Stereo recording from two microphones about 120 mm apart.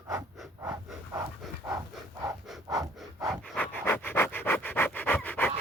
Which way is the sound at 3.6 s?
15° left (ahead or behind).